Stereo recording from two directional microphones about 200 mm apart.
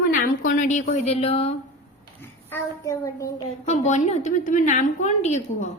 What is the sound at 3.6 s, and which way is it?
A woman's voice, 35° left (ahead or behind).